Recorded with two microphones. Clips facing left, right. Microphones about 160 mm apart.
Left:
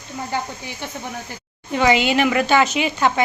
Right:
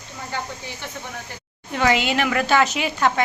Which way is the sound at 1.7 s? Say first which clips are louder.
Left 3 dB; centre (ahead or behind).